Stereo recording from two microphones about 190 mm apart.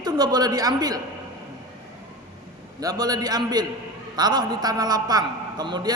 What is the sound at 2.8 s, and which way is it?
A man's voice, 20° right (ahead or behind).